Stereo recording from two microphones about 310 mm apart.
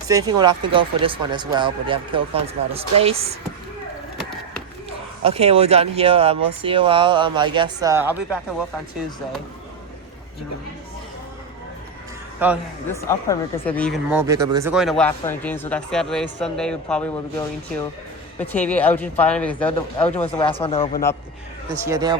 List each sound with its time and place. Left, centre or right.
0.1 s speech: centre
5.2 s speech: centre
12.9 s speech: centre
20.2 s speech: centre
21.8 s speech: centre